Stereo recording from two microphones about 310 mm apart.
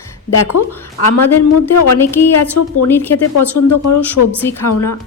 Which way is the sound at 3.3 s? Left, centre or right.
Left.